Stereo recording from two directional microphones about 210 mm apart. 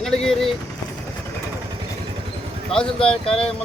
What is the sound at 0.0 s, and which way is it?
Speech, centre (ahead or behind).